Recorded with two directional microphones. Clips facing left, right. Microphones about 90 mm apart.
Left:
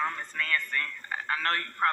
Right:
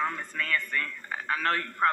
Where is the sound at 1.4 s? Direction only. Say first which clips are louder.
Right 4 dB; 15° right (ahead or behind).